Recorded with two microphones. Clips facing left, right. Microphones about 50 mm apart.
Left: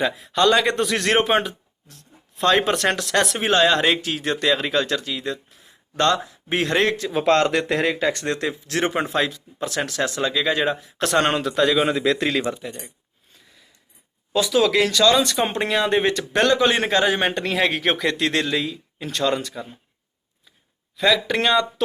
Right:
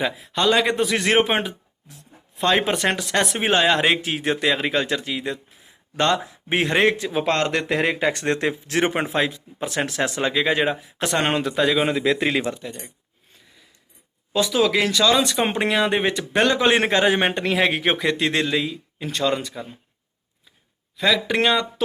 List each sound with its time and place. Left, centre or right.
0.0 s a man's voice: centre
3.4 s speech: centre
5.6 s a sound: centre
6.2 s speech: right
7.1 s a man's voice: centre
7.9 s speech: right
11.0 s a man's voice: centre
12.2 s a man's voice: centre
12.5 s speech: centre
14.3 s a man's voice: centre
16.6 s a man's voice: right; by 19.6 s centre
20.9 s a man's voice: centre